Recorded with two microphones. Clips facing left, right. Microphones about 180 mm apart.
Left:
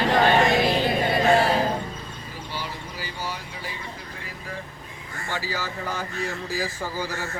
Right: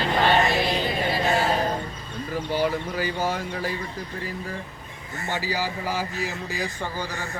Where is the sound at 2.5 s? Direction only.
50° right (ahead or behind).